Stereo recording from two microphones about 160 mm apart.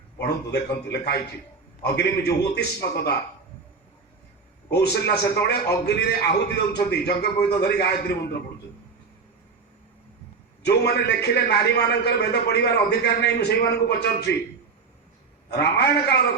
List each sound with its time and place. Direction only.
0.2 s a man's voice: 85° left
4.7 s a man's voice: 90° left
10.6 s a man's voice: 90° left
15.4 s a man's voice: 90° left